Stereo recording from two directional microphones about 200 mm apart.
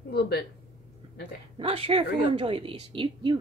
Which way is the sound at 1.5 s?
30° right (ahead or behind).